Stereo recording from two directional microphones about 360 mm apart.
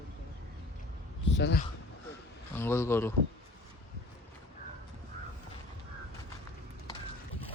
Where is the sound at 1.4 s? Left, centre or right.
Left.